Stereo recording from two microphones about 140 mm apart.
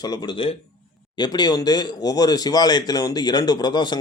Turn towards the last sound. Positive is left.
turn(degrees=30)  # may be behind; listen again after turning